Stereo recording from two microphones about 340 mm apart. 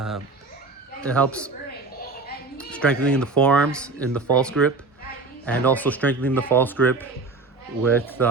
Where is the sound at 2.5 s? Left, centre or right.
Centre.